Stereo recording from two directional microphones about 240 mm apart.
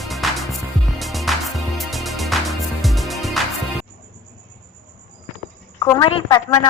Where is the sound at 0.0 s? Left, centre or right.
Centre.